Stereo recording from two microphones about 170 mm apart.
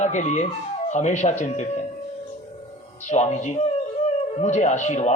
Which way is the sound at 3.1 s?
40° left (ahead or behind).